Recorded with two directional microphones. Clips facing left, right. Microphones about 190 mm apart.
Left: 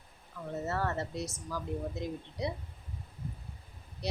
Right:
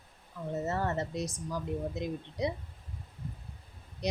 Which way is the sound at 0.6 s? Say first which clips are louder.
Right 1 dB; 20° right (ahead or behind).